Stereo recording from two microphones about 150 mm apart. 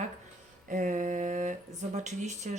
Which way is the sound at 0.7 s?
60° right (ahead or behind).